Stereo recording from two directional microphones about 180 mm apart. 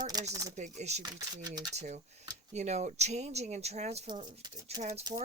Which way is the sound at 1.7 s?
40° right (ahead or behind).